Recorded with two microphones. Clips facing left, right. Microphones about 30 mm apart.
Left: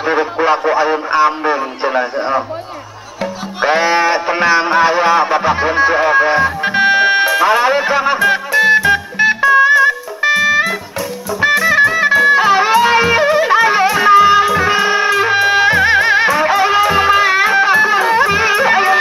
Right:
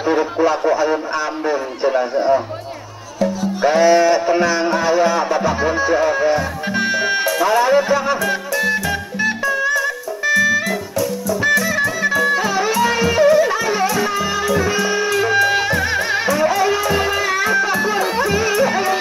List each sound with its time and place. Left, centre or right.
0.0 s a man's voice: left
3.2 s music: left